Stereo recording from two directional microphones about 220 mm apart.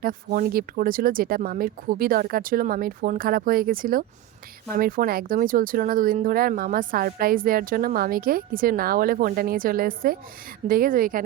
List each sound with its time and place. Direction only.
0.0 s speech: 40° right (ahead or behind)